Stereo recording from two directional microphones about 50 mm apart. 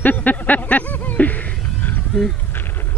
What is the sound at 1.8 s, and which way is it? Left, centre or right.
Roaring cats, left.